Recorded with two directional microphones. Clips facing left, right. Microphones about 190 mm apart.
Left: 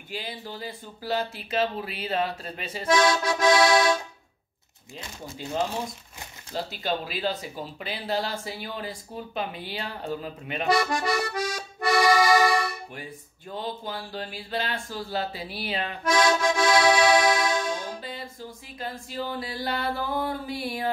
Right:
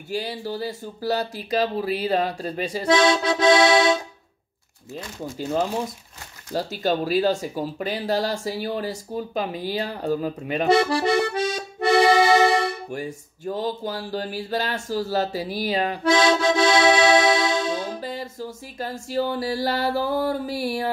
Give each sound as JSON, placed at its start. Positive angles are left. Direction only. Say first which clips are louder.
{"t": 0.1, "sound": "speech", "louder": "right 8 dB", "side_deg": -40}
{"t": 6.5, "sound": "speech", "louder": "right 6 dB", "side_deg": -45}
{"t": 10.7, "sound": "accordion", "louder": "right 5 dB", "side_deg": -30}
{"t": 12.9, "sound": "speech", "louder": "right 9 dB", "side_deg": -45}
{"t": 18.0, "sound": "music", "louder": "right 7 dB", "side_deg": -45}